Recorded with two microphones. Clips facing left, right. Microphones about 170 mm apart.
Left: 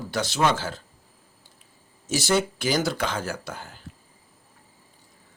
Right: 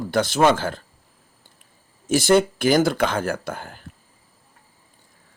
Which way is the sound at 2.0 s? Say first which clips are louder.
Right 7 dB; 55° right (ahead or behind).